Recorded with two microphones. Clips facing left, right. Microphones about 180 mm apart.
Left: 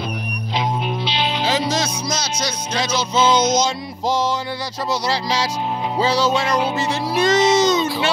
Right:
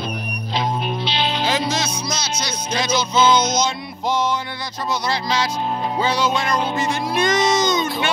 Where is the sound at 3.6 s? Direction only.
35° left (ahead or behind).